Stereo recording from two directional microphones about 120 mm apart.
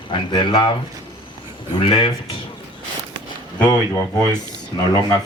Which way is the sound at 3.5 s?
35° left (ahead or behind).